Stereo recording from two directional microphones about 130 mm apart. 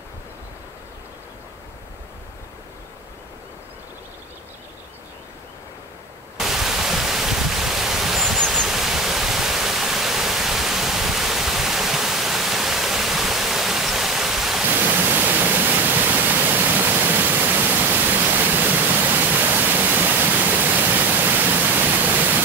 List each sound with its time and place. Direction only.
6.3 s pink noise: 5° right (ahead or behind)